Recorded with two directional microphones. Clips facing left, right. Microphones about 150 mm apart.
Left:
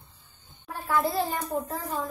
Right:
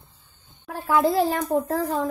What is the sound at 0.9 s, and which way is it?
A child's voice, 90° right.